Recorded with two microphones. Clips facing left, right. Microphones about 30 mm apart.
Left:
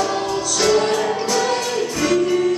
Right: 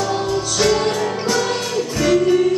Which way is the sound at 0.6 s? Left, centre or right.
Centre.